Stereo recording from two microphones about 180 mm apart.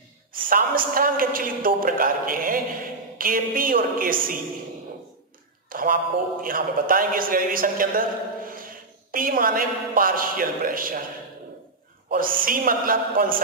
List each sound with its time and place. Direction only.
0.5 s a man's voice: 50° right (ahead or behind)
5.7 s a sound: 50° right (ahead or behind)
6.4 s a man's voice: 50° right (ahead or behind)
12.1 s a woman's voice: 50° right (ahead or behind)